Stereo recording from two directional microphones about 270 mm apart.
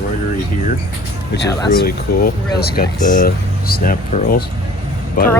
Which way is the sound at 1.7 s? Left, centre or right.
Left.